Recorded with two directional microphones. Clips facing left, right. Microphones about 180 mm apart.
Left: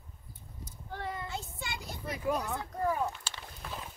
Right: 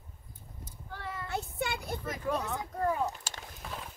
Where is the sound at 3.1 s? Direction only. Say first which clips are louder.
Right 1 dB; 45° right (ahead or behind).